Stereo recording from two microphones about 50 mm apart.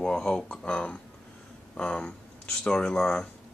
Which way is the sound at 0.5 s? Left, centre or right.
Left.